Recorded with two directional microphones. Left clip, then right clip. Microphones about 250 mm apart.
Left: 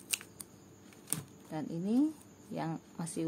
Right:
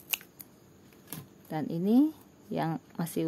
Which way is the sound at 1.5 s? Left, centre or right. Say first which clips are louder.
Right 7 dB; right.